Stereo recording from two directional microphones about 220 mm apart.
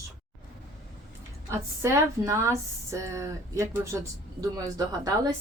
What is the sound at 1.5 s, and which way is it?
A woman's voice, 10° right (ahead or behind).